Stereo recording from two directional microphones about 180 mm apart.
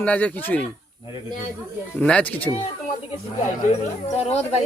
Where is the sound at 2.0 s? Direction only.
5° left (ahead or behind).